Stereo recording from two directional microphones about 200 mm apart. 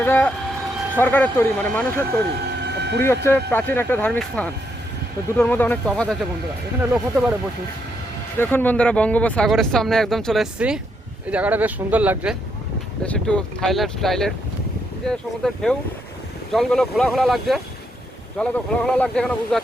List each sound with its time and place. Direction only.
0.0 s speech: 10° left (ahead or behind)
2.6 s vehicle: 55° right (ahead or behind)
3.2 s speech: 10° left (ahead or behind)
8.4 s speech: 10° left (ahead or behind); by 12.4 s 5° right (ahead or behind)
13.1 s speech: 5° left (ahead or behind)